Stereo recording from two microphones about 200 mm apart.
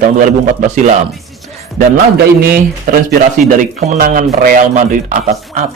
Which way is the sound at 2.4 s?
50° right (ahead or behind).